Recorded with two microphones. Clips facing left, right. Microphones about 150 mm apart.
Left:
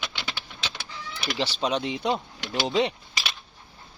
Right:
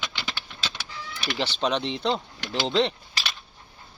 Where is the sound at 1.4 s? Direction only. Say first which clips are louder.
Right 1 dB; 10° left (ahead or behind).